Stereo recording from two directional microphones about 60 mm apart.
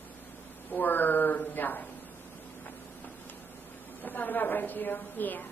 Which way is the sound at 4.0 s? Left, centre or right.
Left.